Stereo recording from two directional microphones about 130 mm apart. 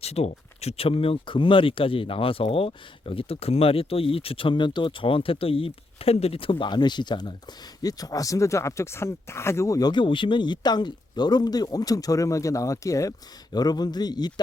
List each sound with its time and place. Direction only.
0.0 s speech: 55° left (ahead or behind); by 14.3 s 30° left (ahead or behind)